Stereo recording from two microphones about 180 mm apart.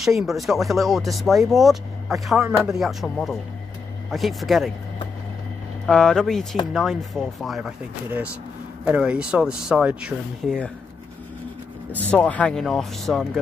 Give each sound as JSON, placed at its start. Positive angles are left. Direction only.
{"t": 0.0, "sound": "speech", "side_deg": 0}
{"t": 5.9, "sound": "speech", "side_deg": 5}
{"t": 8.8, "sound": "speech", "side_deg": -10}
{"t": 12.1, "sound": "speech", "side_deg": 10}